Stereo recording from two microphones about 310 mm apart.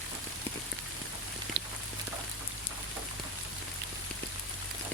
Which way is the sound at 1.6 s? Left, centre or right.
Right.